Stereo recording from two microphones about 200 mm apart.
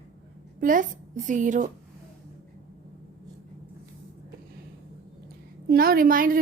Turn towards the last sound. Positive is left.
turn(degrees=-45)  # may be behind; listen again after turning